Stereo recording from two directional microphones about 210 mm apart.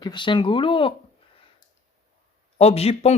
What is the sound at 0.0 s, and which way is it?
Speech, 20° left (ahead or behind).